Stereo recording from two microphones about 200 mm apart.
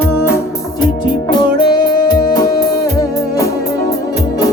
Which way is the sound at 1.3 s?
20° left (ahead or behind).